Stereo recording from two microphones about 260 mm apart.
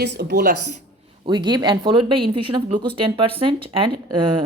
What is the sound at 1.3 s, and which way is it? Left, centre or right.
Speech, centre.